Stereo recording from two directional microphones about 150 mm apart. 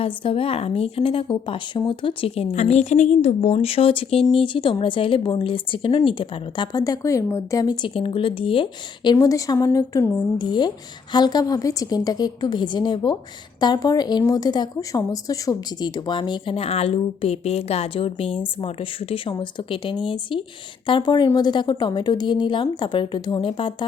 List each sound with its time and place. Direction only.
0.0 s speech: 40° left (ahead or behind)
9.1 s a woman's voice: 25° left (ahead or behind)